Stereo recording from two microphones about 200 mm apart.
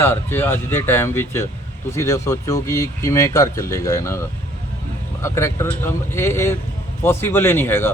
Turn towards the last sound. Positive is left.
turn(degrees=10)  # may be behind; listen again after turning